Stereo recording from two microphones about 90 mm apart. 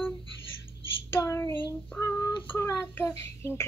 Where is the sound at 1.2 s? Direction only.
35° left (ahead or behind).